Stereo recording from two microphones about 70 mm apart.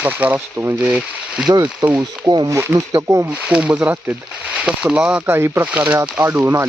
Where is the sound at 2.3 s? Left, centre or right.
Right.